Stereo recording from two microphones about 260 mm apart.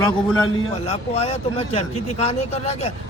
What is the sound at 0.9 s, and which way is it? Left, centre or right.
Speech, left.